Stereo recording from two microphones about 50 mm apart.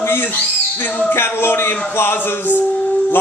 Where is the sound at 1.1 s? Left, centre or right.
Left.